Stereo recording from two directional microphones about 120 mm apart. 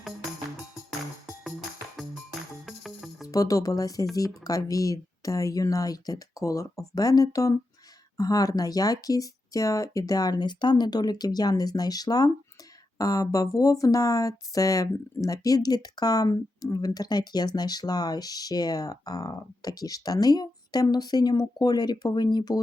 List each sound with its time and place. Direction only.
2.6 s music: centre (ahead or behind)
3.2 s speech: 30° left (ahead or behind)